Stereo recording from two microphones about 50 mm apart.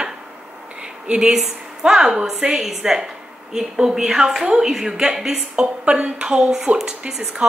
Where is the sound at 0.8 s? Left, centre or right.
Right.